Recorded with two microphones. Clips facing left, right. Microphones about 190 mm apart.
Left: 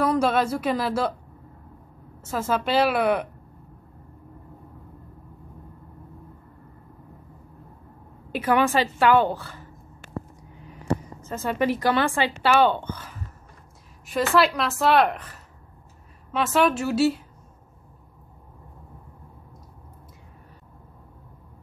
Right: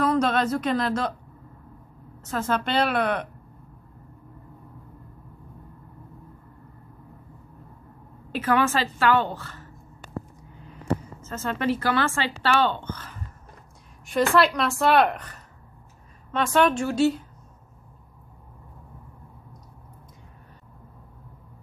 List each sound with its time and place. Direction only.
0.1 s a woman's voice: 10° left (ahead or behind)
2.3 s a woman's voice: 5° left (ahead or behind)
8.3 s a woman's voice: 15° left (ahead or behind)
11.2 s a woman's voice: 15° left (ahead or behind)